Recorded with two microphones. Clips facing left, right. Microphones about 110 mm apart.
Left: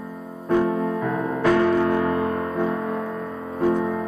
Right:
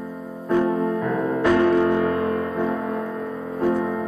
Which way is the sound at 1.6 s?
Centre (ahead or behind).